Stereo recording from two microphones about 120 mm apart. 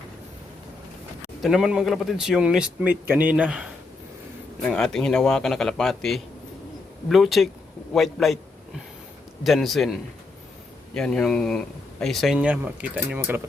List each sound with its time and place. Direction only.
1.4 s speech: 5° right (ahead or behind)
4.6 s speech: 5° left (ahead or behind)
9.4 s speech: centre (ahead or behind); by 13.4 s 15° right (ahead or behind)